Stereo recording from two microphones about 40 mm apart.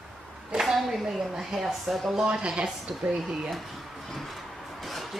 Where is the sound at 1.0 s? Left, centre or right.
Centre.